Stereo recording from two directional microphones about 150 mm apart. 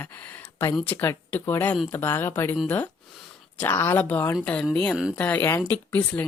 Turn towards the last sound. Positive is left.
turn(degrees=10)  # may be behind; listen again after turning